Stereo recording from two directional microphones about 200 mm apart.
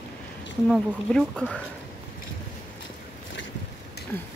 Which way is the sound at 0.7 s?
Centre (ahead or behind).